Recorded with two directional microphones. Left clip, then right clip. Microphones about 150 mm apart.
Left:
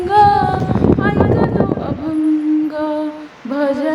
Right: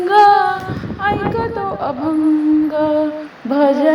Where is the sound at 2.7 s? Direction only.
Centre (ahead or behind).